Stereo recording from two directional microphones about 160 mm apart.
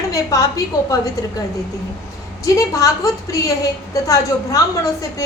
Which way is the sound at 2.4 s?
20° left (ahead or behind).